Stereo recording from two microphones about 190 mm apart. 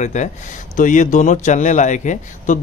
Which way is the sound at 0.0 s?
40° left (ahead or behind).